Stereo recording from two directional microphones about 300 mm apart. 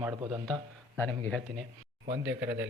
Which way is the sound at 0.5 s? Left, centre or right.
Centre.